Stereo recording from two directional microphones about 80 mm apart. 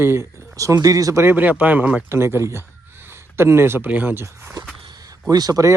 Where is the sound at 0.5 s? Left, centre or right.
Right.